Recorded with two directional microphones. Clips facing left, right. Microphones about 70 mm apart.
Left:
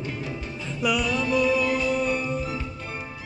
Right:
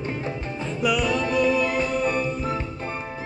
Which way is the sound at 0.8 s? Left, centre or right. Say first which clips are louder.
Right 2 dB; centre.